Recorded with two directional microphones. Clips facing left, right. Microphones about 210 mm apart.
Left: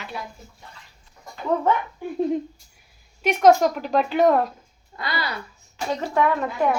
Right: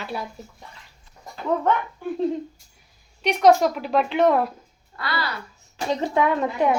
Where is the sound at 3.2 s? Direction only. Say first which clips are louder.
Left 1 dB; centre (ahead or behind).